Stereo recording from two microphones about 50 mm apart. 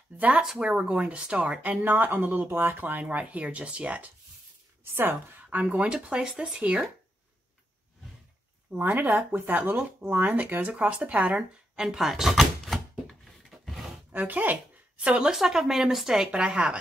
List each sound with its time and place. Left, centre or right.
0.4 s speech: centre; by 4.1 s right
5.5 s speech: right
8.7 s speech: right
11.7 s a sound: centre
14.1 s speech: right
15.0 s speech: right
15.3 s speech: centre
16.3 s speech: right